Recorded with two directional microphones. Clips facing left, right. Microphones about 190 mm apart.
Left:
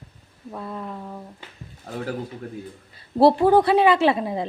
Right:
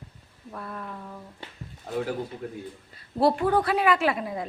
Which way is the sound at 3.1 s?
30° left (ahead or behind).